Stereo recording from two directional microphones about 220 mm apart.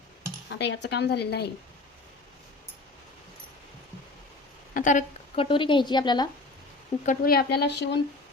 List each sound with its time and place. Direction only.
0.6 s speech: 50° left (ahead or behind)
4.7 s speech: 35° left (ahead or behind); by 6.2 s 20° left (ahead or behind)
7.0 s speech: 40° left (ahead or behind)